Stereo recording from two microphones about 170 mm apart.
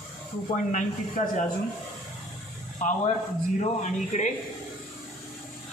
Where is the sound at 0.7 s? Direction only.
45° left (ahead or behind).